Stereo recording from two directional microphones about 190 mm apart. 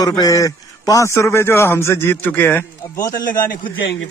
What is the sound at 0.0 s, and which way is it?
A man's voice, 20° left (ahead or behind).